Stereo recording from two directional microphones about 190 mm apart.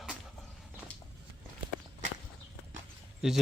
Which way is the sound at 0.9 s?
5° left (ahead or behind).